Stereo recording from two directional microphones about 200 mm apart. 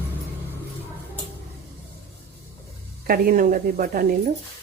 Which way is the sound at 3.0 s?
45° right (ahead or behind).